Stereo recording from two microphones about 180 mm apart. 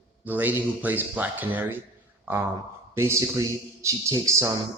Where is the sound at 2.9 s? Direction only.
15° right (ahead or behind).